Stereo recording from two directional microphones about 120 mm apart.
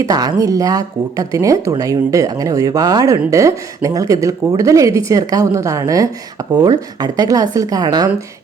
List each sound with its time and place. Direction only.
0.1 s a woman's voice: 30° right (ahead or behind)